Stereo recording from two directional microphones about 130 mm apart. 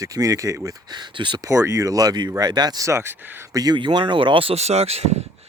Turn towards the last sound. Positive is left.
turn(degrees=-55)  # may be behind; listen again after turning